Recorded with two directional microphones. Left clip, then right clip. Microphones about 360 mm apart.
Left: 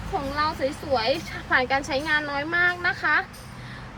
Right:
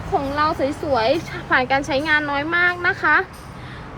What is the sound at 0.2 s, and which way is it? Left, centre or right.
Speech, centre.